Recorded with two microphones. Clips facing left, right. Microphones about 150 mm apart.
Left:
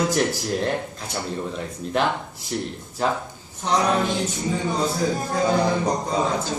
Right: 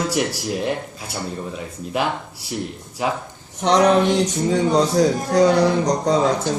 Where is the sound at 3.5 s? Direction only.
80° right.